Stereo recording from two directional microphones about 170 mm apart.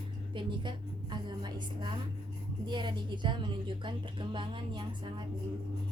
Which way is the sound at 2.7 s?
25° right (ahead or behind).